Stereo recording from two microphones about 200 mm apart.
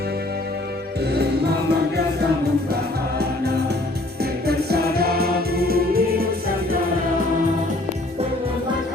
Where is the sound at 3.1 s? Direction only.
55° right (ahead or behind).